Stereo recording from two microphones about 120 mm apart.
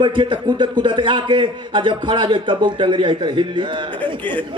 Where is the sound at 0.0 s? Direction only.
40° right (ahead or behind).